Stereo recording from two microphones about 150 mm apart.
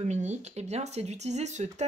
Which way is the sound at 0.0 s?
50° right (ahead or behind).